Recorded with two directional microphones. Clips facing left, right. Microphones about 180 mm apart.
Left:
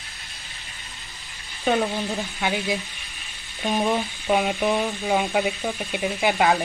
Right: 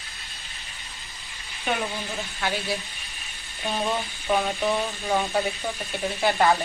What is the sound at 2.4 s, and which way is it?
Speech, 15° left (ahead or behind).